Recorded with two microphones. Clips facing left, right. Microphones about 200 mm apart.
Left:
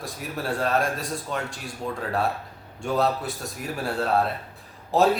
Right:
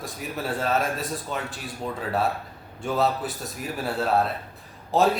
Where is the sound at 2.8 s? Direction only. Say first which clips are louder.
Even; centre (ahead or behind).